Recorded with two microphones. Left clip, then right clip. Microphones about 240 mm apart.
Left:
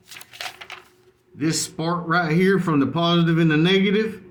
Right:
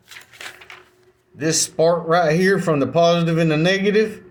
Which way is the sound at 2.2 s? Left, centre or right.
Centre.